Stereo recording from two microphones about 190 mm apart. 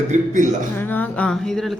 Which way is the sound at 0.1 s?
40° right (ahead or behind).